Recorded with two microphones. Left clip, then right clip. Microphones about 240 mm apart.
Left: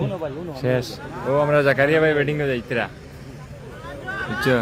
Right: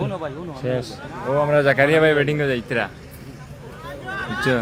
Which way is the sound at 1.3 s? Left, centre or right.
Centre.